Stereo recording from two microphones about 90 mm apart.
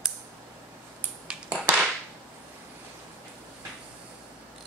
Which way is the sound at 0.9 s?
15° right (ahead or behind).